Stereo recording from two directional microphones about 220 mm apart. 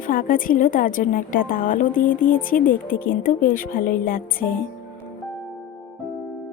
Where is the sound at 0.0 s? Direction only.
40° left (ahead or behind).